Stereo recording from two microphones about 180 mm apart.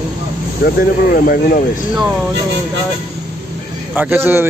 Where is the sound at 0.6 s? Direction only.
60° left (ahead or behind).